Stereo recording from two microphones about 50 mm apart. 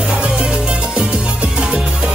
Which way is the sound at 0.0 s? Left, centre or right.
Right.